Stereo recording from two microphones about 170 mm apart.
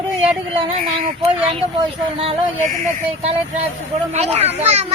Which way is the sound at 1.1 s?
35° right (ahead or behind).